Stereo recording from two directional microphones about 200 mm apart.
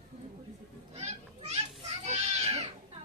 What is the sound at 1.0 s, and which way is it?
Children playing, 35° right (ahead or behind).